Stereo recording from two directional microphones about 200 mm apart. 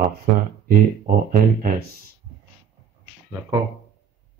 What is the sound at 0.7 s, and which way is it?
Speech, 45° right (ahead or behind).